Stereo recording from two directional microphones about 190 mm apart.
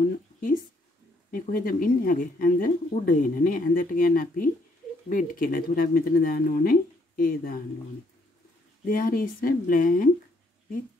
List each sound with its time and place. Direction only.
1.3 s speech: 50° left (ahead or behind)
8.8 s speech: 50° left (ahead or behind)